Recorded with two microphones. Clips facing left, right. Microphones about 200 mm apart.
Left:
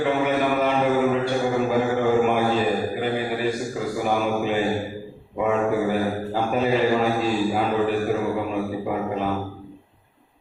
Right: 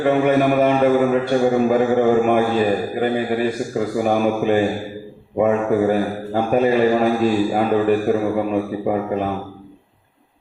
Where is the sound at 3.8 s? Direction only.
55° right (ahead or behind).